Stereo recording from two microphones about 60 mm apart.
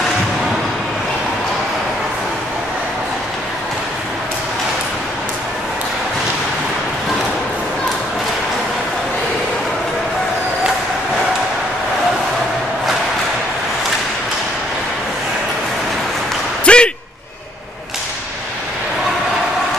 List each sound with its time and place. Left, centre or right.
16.6 s slam: centre